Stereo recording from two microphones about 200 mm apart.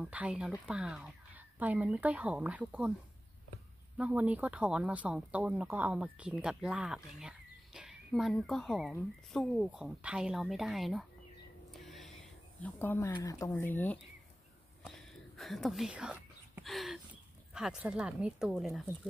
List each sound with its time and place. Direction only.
0.0 s speech: 5° right (ahead or behind)
4.0 s speech: 5° right (ahead or behind)
11.7 s gasp: centre (ahead or behind)
12.6 s speech: 10° left (ahead or behind)
14.9 s whispering: centre (ahead or behind)
17.6 s speech: 5° right (ahead or behind)